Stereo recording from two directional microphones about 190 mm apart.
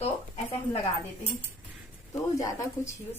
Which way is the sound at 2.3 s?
20° left (ahead or behind).